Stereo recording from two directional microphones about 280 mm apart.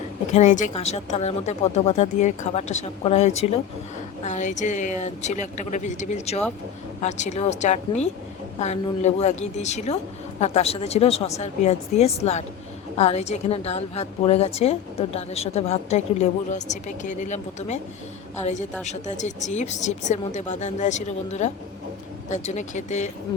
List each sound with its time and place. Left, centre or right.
0.3 s a woman's voice: left
18.9 s a woman's voice: left